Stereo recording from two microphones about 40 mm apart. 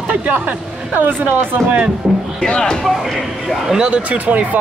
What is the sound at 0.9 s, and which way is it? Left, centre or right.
Speech, right.